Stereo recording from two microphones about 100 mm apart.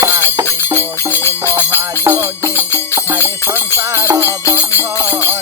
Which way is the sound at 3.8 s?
30° right (ahead or behind).